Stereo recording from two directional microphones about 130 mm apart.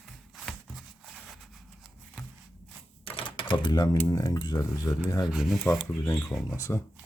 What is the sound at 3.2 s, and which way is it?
Typewriter, 40° left (ahead or behind).